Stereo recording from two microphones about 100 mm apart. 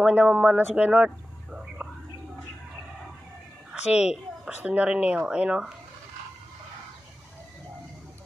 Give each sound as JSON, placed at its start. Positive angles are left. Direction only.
{"t": 0.0, "sound": "speech", "side_deg": -15}
{"t": 3.9, "sound": "speech", "side_deg": -10}